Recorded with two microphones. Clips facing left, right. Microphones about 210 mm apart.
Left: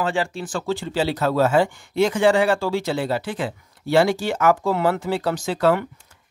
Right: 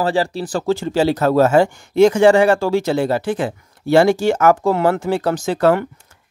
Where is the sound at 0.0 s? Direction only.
35° right (ahead or behind).